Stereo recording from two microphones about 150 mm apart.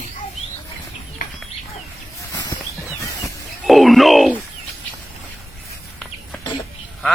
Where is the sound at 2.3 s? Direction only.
25° left (ahead or behind).